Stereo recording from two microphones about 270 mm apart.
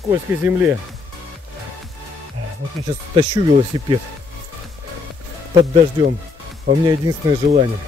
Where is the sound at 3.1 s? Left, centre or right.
Centre.